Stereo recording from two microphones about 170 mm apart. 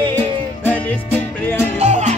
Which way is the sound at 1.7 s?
40° right (ahead or behind).